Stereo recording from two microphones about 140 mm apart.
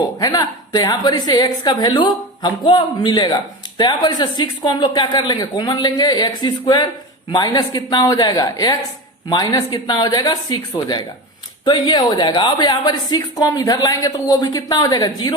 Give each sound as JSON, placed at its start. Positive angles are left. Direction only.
{"t": 0.2, "sound": "a woman's voice", "side_deg": 25}